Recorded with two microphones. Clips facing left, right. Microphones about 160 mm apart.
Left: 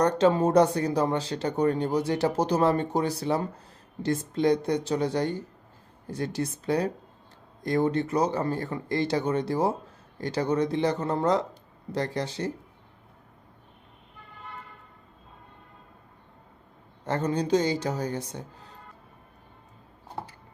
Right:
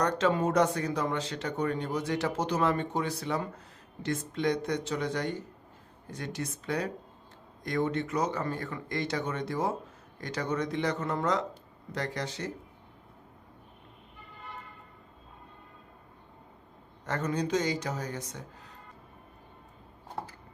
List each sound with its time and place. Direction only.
0.0 s speech: 30° left (ahead or behind)
17.1 s speech: 30° left (ahead or behind)
20.2 s a sound: centre (ahead or behind)